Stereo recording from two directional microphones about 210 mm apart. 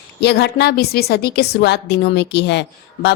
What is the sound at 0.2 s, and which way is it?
A woman's voice, 55° left (ahead or behind).